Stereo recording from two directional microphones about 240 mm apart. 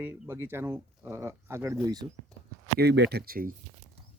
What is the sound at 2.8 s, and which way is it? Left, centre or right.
Speech, right.